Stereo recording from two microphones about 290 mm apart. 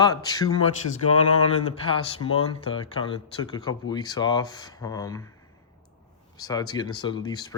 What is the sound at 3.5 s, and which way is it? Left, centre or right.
Speech, centre.